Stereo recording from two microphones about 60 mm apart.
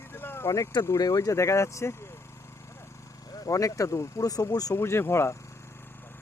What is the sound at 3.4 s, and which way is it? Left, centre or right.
Speech, left.